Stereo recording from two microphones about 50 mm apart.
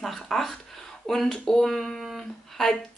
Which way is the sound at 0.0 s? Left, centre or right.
Centre.